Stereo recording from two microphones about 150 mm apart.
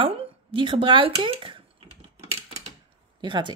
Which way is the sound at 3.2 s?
30° right (ahead or behind).